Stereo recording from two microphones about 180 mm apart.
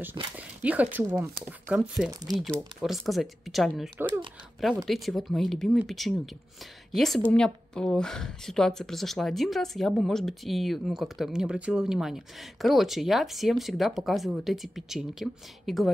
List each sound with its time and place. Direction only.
0.2 s speech: 25° right (ahead or behind)
0.6 s speech: 10° right (ahead or behind)